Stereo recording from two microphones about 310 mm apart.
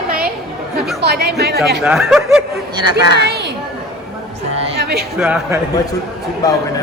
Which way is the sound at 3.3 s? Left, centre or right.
Right.